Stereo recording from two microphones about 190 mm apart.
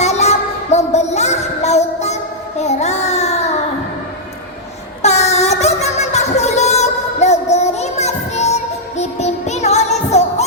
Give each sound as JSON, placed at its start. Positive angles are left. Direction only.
{"t": 0.0, "sound": "music", "side_deg": 35}
{"t": 5.0, "sound": "music", "side_deg": 35}